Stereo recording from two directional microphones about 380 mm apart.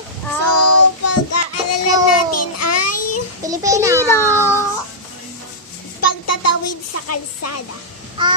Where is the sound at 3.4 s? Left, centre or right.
Centre.